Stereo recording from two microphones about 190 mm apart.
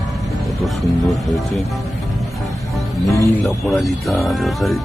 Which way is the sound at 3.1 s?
15° left (ahead or behind).